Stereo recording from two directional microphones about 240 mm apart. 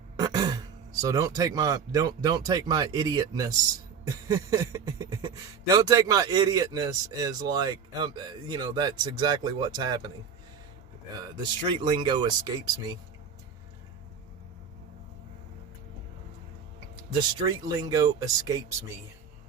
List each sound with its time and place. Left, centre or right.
0.2 s throat clearing: centre
1.0 s speech: centre
11.7 s speech: right
17.2 s speech: centre